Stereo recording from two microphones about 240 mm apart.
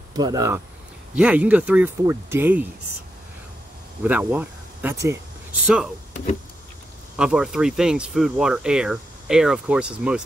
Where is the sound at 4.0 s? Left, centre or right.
Centre.